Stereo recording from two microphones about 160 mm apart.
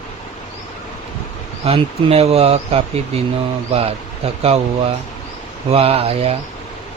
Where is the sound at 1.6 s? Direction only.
40° right (ahead or behind).